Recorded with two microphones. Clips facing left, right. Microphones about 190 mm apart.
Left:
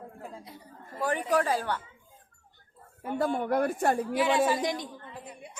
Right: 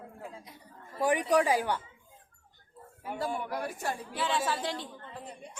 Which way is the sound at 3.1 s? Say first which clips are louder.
Left 7 dB; 55° left (ahead or behind).